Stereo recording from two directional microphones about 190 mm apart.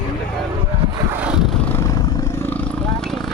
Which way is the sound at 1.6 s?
10° left (ahead or behind).